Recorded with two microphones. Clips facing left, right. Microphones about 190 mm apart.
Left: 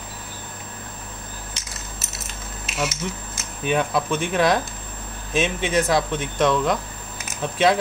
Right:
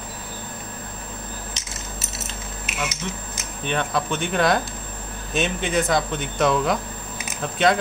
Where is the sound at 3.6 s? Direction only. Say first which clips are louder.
Left 3 dB; 5° left (ahead or behind).